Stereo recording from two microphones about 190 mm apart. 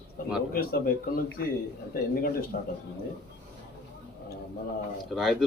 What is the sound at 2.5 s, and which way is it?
Speech, 45° left (ahead or behind).